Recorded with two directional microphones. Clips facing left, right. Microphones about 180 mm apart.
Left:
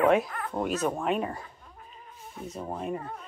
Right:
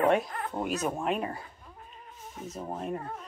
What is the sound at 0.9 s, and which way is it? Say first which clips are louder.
Speech: left 2 dB; centre (ahead or behind).